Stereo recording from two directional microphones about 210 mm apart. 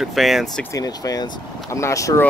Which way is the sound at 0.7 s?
15° left (ahead or behind).